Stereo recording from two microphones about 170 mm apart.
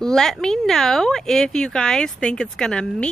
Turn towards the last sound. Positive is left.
turn(degrees=5)  # may be behind; listen again after turning